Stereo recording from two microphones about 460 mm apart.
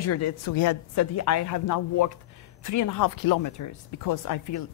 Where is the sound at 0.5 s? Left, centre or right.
Left.